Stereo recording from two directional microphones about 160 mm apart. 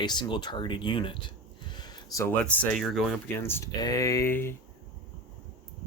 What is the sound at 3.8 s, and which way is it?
Speech, 20° left (ahead or behind).